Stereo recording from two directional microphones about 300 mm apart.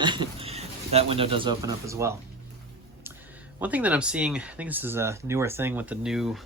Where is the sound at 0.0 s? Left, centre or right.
Centre.